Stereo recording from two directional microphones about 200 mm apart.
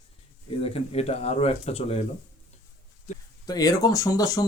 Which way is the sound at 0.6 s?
30° left (ahead or behind).